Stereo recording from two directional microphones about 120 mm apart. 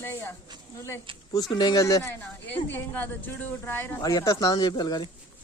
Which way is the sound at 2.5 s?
15° left (ahead or behind).